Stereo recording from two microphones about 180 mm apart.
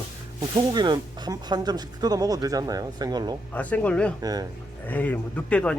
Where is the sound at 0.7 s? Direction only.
25° right (ahead or behind).